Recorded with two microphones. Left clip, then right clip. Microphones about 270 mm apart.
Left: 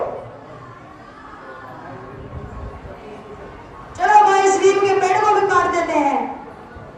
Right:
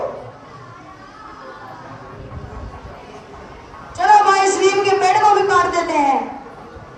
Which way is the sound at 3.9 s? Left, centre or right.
Right.